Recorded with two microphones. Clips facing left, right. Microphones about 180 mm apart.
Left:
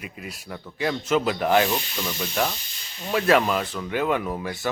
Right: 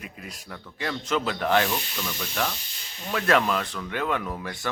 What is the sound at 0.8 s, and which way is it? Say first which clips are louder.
Speech: left 5 dB; 10° left (ahead or behind).